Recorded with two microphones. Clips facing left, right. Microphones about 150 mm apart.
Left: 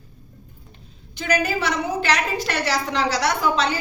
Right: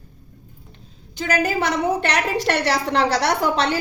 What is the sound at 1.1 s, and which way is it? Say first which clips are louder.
A woman's voice: right 1 dB; 40° right (ahead or behind).